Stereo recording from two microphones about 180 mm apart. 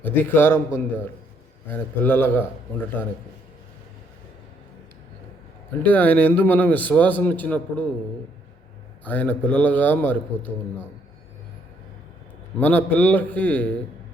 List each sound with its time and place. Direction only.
0.0 s a man's voice: 10° left (ahead or behind)
5.8 s a man's voice: 10° left (ahead or behind)
9.0 s a man's voice: 10° left (ahead or behind)
12.5 s a man's voice: 10° left (ahead or behind)